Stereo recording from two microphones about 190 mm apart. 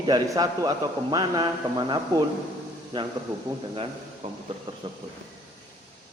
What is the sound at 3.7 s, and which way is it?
A woman's voice, 30° right (ahead or behind).